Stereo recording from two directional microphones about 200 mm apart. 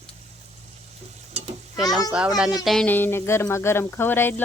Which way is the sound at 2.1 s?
5° right (ahead or behind).